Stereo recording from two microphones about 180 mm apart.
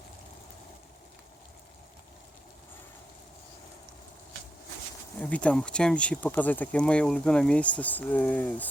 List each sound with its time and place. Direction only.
5.2 s speech: 5° left (ahead or behind)